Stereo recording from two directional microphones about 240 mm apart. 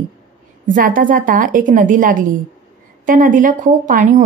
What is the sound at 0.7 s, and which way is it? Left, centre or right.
Speech, right.